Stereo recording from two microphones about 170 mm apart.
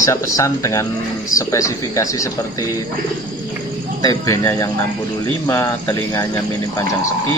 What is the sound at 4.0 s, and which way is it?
Speech, 20° left (ahead or behind).